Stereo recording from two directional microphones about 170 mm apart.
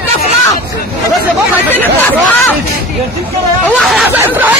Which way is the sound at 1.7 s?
10° left (ahead or behind).